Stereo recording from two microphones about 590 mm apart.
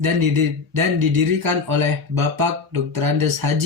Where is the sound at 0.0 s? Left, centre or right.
Right.